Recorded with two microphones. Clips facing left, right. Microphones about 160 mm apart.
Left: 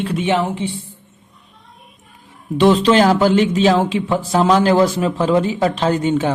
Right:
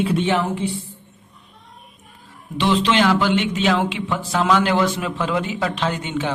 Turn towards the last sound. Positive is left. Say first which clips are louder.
# left 7 dB
turn(degrees=40)  # may be behind; listen again after turning